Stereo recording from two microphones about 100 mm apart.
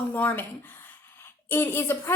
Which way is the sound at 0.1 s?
20° left (ahead or behind).